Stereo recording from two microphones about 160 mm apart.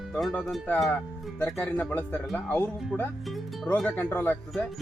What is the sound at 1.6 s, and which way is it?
Speech, 10° left (ahead or behind).